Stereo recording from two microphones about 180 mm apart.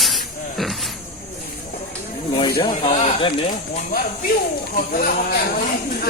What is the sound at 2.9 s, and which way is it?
Speech, 40° left (ahead or behind).